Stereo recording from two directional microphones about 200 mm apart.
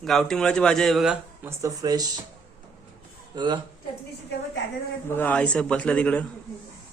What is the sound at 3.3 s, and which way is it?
Speech, 20° right (ahead or behind).